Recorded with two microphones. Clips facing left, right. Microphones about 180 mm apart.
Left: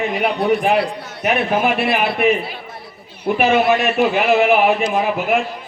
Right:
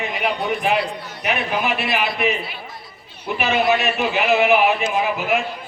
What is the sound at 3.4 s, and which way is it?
A man's voice, 50° left (ahead or behind).